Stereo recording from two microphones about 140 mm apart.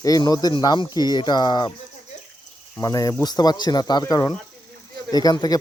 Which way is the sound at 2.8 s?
25° left (ahead or behind).